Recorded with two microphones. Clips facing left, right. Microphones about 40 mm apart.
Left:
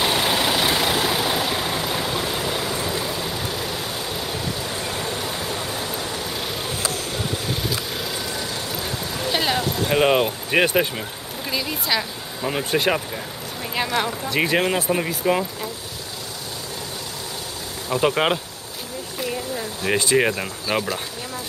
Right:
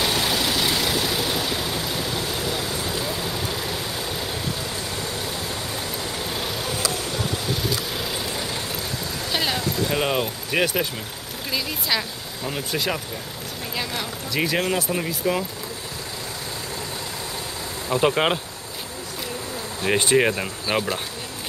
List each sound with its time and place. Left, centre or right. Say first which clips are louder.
0.0 s vehicle: left 2 dB; left
3.1 s vehicle: left 1 dB; centre
5.0 s a sound: left 2 dB; left
6.4 s vehicle: even; centre
7.9 s vehicle: even; centre
9.3 s a sound: left 2 dB; centre
9.6 s a sound: left 2 dB; left
9.9 s speech: left 9 dB; centre
11.5 s speech: left 1 dB; centre
12.4 s speech: left 5 dB; left
12.7 s speech: left 6 dB; left; by 15.4 s centre
17.9 s speech: even; centre
20.1 s speech: even; centre